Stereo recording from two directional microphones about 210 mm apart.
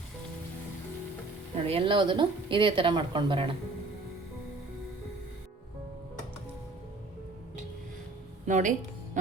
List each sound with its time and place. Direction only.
1.6 s speech: 25° right (ahead or behind)
8.4 s speech: 35° right (ahead or behind)